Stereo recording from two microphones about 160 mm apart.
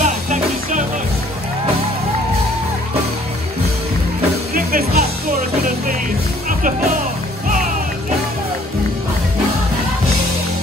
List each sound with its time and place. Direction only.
0.0 s music: 50° right (ahead or behind)
4.6 s music: 65° right (ahead or behind)